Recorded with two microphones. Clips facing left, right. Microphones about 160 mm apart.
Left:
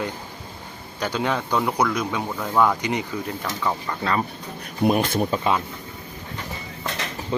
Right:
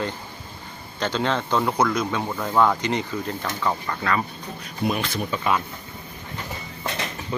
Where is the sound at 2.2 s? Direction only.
Centre (ahead or behind).